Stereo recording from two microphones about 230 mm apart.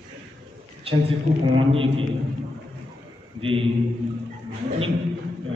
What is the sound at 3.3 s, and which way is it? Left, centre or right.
Speech, right.